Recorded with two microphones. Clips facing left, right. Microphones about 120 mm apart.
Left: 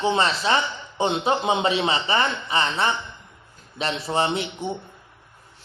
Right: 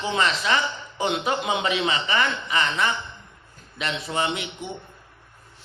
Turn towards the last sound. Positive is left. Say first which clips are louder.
# left 3 dB
turn(degrees=35)  # may be behind; listen again after turning